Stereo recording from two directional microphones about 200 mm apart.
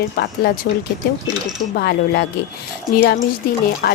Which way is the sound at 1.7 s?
55° left (ahead or behind).